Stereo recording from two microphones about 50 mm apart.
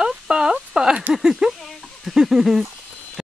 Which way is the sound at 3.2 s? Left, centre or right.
Centre.